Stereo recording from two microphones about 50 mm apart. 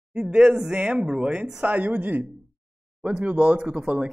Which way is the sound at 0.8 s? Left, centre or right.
Right.